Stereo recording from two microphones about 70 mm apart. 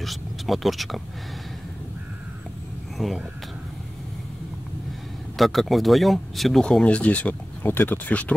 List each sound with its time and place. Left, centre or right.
0.0 s speech: centre
3.0 s speech: centre
5.4 s speech: centre
6.6 s speech: centre